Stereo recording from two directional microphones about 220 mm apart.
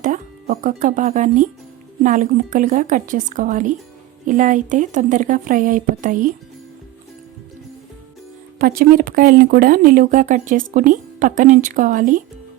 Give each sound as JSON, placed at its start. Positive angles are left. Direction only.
{"t": 0.0, "sound": "speech", "side_deg": -35}
{"t": 8.5, "sound": "speech", "side_deg": -40}